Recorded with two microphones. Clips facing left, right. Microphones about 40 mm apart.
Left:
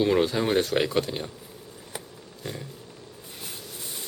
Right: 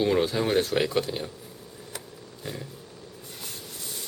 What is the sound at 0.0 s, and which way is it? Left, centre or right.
Speech, centre.